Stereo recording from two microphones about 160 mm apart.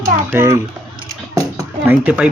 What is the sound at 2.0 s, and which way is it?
Speech, 10° right (ahead or behind).